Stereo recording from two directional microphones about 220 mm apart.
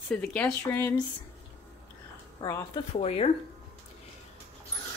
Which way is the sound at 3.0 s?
25° left (ahead or behind).